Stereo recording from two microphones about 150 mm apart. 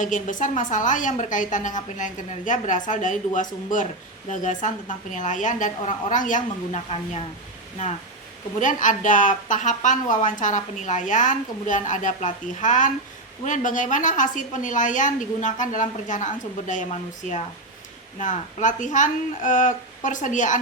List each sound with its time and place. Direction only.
0.0 s a woman's voice: 60° left (ahead or behind)
8.5 s a woman's voice: 60° left (ahead or behind)